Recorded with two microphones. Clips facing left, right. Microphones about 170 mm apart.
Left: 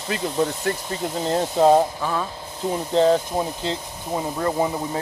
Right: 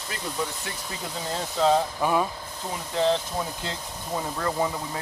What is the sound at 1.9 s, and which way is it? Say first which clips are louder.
Speech: right 2 dB; 10° right (ahead or behind).